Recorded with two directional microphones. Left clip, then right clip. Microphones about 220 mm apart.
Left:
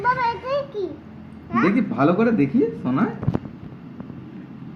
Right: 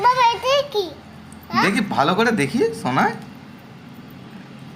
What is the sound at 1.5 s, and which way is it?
Speech, 55° right (ahead or behind).